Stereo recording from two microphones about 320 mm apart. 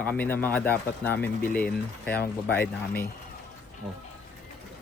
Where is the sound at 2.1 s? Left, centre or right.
Left.